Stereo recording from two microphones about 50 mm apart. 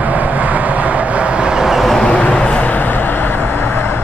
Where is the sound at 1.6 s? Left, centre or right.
Centre.